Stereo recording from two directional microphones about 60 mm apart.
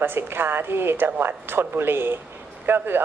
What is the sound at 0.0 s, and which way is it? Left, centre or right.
A woman's voice, right.